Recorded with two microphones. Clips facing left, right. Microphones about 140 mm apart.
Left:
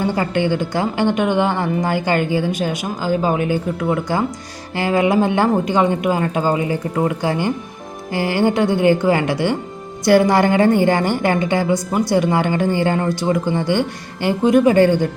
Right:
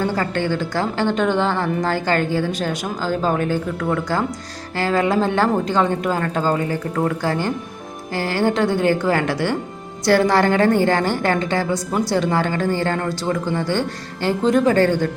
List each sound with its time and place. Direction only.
0.0 s a woman's voice: 15° left (ahead or behind)